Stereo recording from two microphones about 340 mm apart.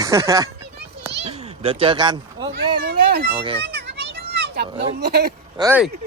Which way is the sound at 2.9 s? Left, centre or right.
Right.